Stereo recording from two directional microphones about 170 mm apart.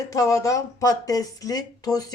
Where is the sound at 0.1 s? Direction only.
20° left (ahead or behind).